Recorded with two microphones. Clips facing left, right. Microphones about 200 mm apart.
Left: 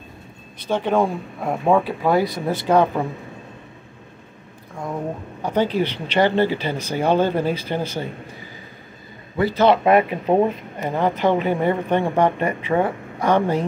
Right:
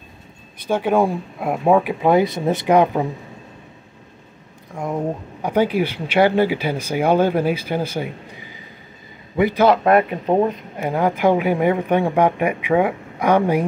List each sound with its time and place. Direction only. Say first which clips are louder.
0.6 s speech: right 2 dB; 10° right (ahead or behind)
5.4 s speech: right 2 dB; 10° right (ahead or behind)
9.4 s speech: right 2 dB; 15° right (ahead or behind)
9.7 s speech: left 3 dB; centre (ahead or behind)
10.8 s speech: right 2 dB; 10° right (ahead or behind)